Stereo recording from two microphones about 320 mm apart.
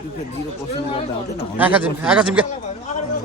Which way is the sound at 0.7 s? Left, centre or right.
Centre.